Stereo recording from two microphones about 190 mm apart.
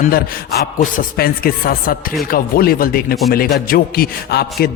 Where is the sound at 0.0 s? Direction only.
50° left (ahead or behind).